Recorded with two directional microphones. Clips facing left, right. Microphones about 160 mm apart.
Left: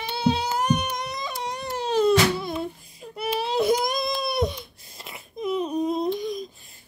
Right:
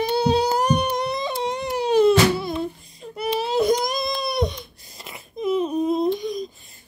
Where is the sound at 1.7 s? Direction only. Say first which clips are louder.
Right 4 dB; 10° right (ahead or behind).